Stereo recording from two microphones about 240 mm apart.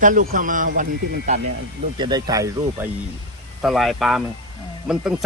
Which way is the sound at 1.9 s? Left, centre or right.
Centre.